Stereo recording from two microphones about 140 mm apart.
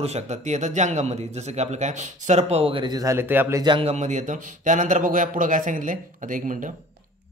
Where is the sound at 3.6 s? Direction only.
40° right (ahead or behind); by 6.7 s 65° right (ahead or behind).